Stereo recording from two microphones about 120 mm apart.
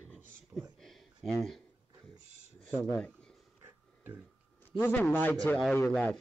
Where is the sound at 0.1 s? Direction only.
Centre (ahead or behind).